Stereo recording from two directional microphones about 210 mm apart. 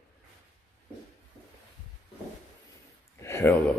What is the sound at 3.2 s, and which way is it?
Speech, 10° left (ahead or behind).